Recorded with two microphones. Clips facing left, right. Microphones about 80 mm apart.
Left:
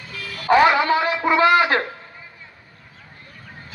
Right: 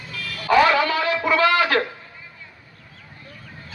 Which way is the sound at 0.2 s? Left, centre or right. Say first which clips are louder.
Left 2 dB; centre.